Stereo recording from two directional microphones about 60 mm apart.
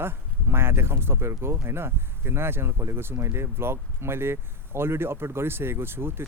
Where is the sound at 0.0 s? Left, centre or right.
Right.